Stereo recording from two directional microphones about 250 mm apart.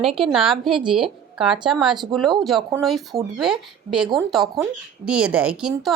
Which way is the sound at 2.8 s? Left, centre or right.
Centre.